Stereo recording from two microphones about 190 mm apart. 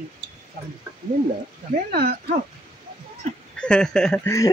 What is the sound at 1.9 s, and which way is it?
Speech, 55° right (ahead or behind).